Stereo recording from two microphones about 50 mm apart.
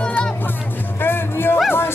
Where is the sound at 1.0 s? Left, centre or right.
Left.